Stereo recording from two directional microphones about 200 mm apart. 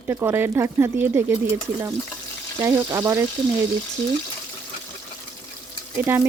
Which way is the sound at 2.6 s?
15° right (ahead or behind).